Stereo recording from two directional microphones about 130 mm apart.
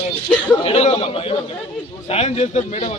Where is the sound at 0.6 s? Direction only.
55° left (ahead or behind).